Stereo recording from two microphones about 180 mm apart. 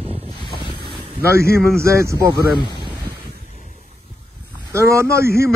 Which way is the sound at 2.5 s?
25° left (ahead or behind).